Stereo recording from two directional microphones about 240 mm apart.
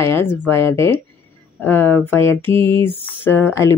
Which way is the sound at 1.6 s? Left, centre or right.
Centre.